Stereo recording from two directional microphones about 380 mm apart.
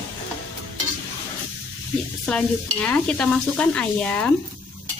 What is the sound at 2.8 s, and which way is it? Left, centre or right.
Speech, centre.